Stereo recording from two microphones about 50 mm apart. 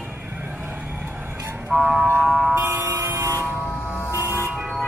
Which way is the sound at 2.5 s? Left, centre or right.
Right.